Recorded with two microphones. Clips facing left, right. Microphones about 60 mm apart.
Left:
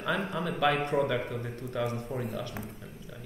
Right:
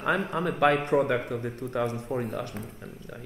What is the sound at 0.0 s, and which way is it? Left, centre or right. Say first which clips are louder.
Speech: right 4 dB; right.